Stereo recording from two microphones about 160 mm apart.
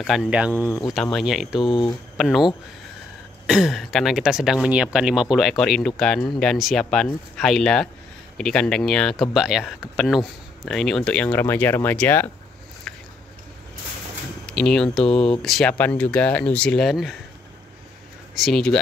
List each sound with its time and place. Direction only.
0.0 s speech: 5° right (ahead or behind)
0.7 s speech: centre (ahead or behind)
1.6 s speech: 30° left (ahead or behind)
2.1 s speech: centre (ahead or behind)
3.4 s speech: centre (ahead or behind)
12.9 s biting: 5° left (ahead or behind)
14.4 s speech: 5° left (ahead or behind)
15.0 s speech: 35° left (ahead or behind)
15.4 s speech: 5° left (ahead or behind)
18.3 s speech: centre (ahead or behind)